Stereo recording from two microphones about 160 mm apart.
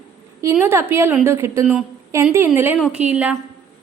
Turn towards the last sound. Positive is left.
turn(degrees=-10)  # may be behind; listen again after turning